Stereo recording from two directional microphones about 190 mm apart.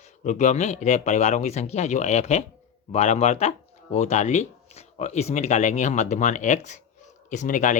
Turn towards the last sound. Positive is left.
turn(degrees=40)  # may be behind; listen again after turning